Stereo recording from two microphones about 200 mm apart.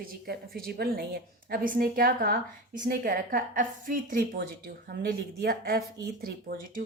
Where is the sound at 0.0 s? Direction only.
50° right (ahead or behind).